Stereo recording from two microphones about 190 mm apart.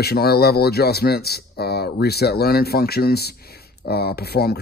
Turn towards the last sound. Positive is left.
turn(degrees=55)  # may be behind; listen again after turning